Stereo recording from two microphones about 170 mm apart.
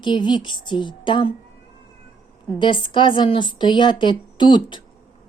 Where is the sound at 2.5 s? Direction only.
30° left (ahead or behind).